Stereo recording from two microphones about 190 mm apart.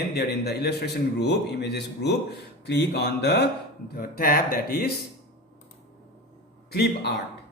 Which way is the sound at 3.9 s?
50° left (ahead or behind).